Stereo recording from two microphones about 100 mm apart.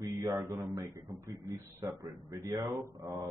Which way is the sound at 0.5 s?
40° right (ahead or behind).